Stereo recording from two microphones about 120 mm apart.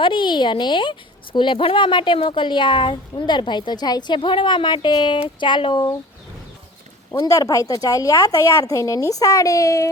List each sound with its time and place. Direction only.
0.0 s a woman's voice: 40° left (ahead or behind)
7.3 s speech: 25° left (ahead or behind)